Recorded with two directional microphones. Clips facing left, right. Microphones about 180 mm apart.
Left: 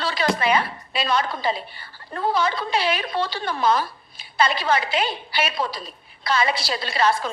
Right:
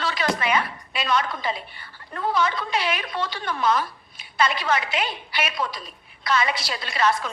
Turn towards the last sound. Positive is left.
turn(degrees=30)  # may be behind; listen again after turning